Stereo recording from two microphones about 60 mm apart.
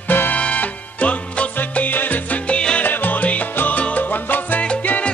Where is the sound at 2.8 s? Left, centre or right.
Left.